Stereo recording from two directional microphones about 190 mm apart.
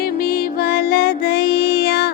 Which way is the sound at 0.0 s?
50° left (ahead or behind).